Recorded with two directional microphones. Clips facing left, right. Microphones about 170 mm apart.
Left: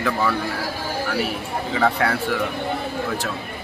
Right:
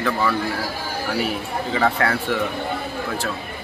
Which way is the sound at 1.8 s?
Centre (ahead or behind).